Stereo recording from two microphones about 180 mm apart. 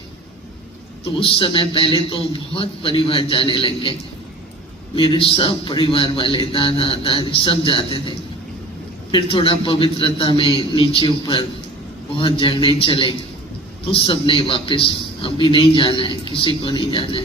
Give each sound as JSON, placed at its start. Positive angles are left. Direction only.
{"t": 1.2, "sound": "a man's voice", "side_deg": 30}
{"t": 4.9, "sound": "a man's voice", "side_deg": 30}
{"t": 9.1, "sound": "a man's voice", "side_deg": 30}